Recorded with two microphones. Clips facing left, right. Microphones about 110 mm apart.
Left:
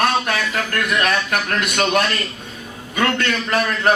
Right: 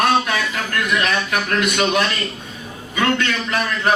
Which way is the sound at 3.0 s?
50° left (ahead or behind).